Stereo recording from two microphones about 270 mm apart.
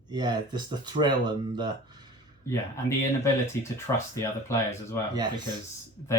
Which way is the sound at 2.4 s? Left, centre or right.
Centre.